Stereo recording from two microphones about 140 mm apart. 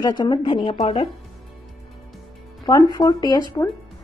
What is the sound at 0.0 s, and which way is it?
A woman's voice, 30° left (ahead or behind).